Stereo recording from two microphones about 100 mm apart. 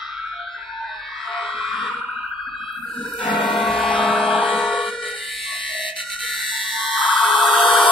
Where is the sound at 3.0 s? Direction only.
55° left (ahead or behind).